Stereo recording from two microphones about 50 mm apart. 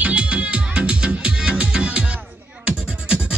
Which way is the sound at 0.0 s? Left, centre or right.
Right.